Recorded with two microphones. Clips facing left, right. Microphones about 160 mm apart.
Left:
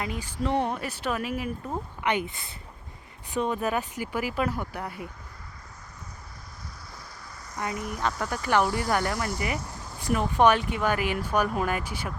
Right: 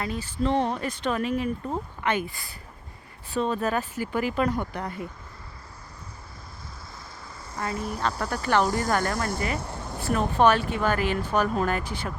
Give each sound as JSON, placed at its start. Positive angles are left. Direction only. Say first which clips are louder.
{"t": 0.0, "sound": "speech", "louder": "right 3 dB", "side_deg": 15}
{"t": 2.0, "sound": "speech", "louder": "even", "side_deg": 20}
{"t": 7.8, "sound": "speech", "louder": "right 2 dB", "side_deg": -30}
{"t": 8.2, "sound": "speech", "louder": "right 1 dB", "side_deg": 10}
{"t": 9.6, "sound": "a sound", "louder": "right 5 dB", "side_deg": -65}
{"t": 10.0, "sound": "speech", "louder": "even", "side_deg": 15}